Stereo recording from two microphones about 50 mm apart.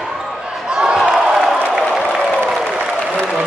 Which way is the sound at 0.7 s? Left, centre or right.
Centre.